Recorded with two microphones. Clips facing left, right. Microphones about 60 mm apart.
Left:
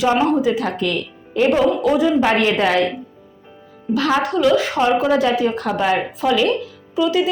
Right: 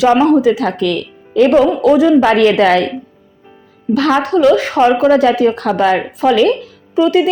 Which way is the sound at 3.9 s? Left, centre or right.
Right.